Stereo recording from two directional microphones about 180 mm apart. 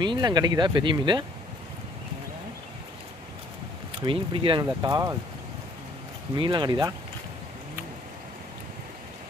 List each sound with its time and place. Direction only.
0.0 s speech: 25° right (ahead or behind)
4.0 s speech: 30° right (ahead or behind)
6.3 s speech: 25° right (ahead or behind)